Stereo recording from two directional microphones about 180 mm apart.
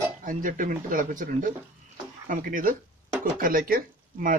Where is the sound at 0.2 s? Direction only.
50° right (ahead or behind).